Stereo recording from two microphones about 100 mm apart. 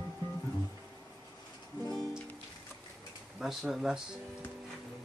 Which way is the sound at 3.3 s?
5° right (ahead or behind).